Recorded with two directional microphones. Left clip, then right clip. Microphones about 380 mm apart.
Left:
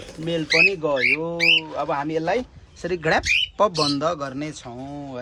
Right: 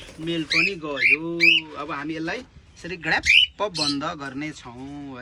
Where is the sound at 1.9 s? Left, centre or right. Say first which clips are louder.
Left 9 dB; left.